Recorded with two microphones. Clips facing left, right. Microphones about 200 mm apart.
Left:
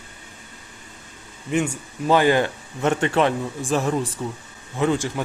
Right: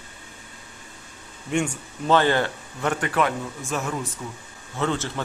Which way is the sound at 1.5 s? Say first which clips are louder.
Left 2 dB; 5° left (ahead or behind).